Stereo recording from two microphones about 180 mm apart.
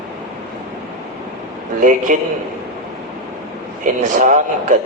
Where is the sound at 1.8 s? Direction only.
45° right (ahead or behind).